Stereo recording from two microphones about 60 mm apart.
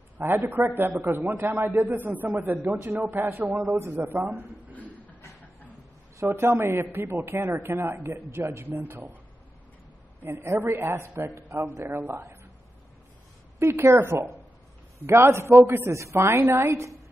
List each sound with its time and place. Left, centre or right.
0.2 s a man's voice: right
4.7 s a sound: left
6.1 s a man's voice: right
10.2 s a man's voice: right
11.6 s a man's voice: right
12.0 s a man's voice: right
13.6 s a man's voice: right